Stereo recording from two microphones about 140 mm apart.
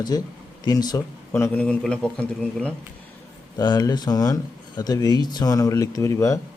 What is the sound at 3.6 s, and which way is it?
Speech, 30° left (ahead or behind).